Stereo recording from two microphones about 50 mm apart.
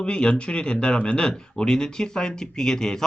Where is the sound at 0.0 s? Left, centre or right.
Centre.